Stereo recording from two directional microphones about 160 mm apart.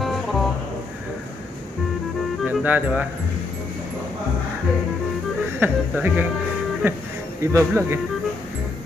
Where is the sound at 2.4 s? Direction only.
10° right (ahead or behind).